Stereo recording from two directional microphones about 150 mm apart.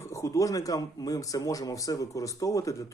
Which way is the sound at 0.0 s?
20° left (ahead or behind).